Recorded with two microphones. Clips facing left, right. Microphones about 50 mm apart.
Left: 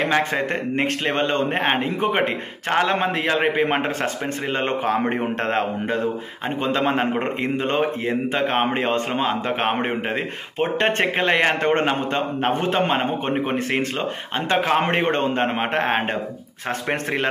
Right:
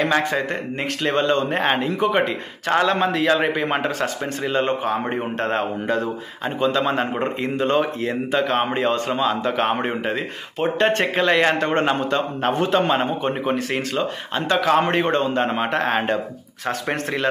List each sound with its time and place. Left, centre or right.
1.0 s a man's voice: left
7.2 s speech: left